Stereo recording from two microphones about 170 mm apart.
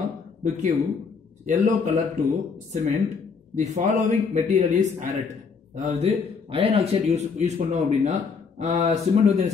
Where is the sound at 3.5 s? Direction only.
45° right (ahead or behind).